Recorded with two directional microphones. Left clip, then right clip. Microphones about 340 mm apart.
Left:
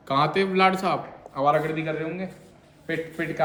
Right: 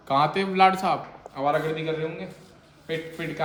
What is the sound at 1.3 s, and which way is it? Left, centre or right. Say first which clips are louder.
A man's voice: left 2 dB; centre.